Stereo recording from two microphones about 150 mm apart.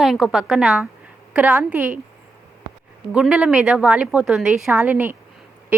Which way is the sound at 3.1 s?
5° right (ahead or behind).